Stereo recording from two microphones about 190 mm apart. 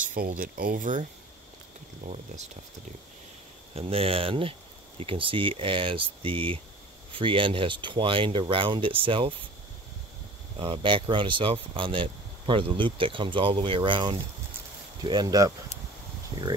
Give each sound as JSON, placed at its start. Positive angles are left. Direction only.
{"t": 0.1, "sound": "speech", "side_deg": -45}
{"t": 2.0, "sound": "speech", "side_deg": -35}
{"t": 3.7, "sound": "speech", "side_deg": -30}
{"t": 10.6, "sound": "speech", "side_deg": -25}